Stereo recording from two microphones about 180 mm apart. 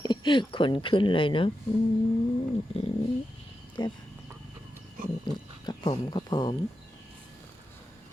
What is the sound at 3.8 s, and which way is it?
Speech, 25° left (ahead or behind).